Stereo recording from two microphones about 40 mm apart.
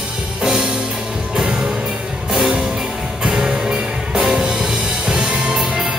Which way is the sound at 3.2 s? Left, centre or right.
Centre.